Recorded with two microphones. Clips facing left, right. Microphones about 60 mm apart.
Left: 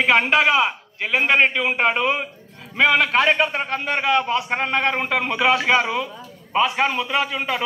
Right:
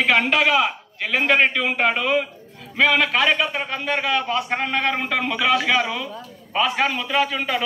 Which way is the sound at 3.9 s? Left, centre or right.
Left.